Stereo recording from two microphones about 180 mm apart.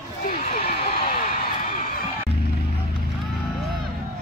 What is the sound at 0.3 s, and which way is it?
Horse, 55° left (ahead or behind).